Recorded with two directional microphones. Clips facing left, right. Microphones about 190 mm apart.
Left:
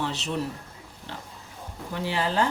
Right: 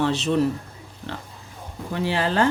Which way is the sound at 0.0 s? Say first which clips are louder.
Right 8 dB; 85° right.